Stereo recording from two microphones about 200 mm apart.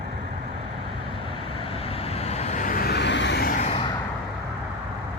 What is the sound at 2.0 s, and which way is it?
Vehicle, 30° left (ahead or behind).